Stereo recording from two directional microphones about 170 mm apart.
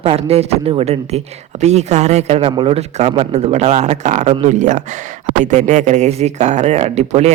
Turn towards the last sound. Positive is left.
turn(degrees=-40)  # may be behind; listen again after turning